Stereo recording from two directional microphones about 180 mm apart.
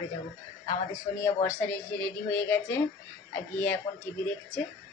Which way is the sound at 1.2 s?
15° left (ahead or behind).